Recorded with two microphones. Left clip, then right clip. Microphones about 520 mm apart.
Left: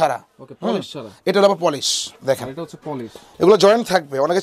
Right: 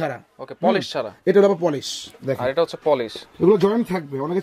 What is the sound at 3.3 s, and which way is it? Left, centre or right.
Speech, left.